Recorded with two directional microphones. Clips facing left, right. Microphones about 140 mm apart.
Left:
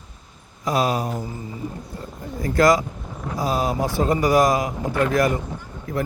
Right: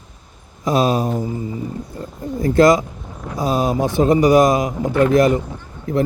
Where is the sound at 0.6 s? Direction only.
25° right (ahead or behind).